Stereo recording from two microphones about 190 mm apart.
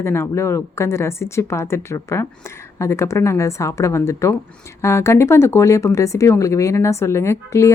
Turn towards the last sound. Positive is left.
turn(degrees=15)  # may be behind; listen again after turning